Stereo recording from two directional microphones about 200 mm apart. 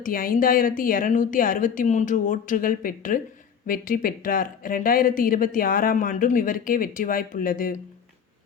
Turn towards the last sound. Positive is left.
turn(degrees=45)  # may be behind; listen again after turning